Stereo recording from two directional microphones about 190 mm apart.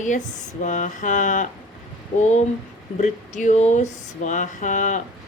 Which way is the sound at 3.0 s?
40° left (ahead or behind).